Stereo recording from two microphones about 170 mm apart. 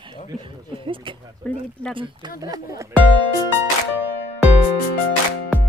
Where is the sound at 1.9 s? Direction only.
30° right (ahead or behind).